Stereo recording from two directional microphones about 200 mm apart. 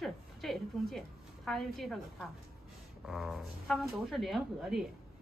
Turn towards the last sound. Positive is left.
turn(degrees=0)  # may be behind; listen again after turning